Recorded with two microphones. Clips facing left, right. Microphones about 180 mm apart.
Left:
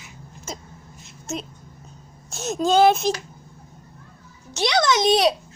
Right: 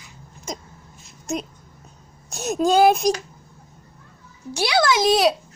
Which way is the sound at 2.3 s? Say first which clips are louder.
Right 2 dB; 15° right (ahead or behind).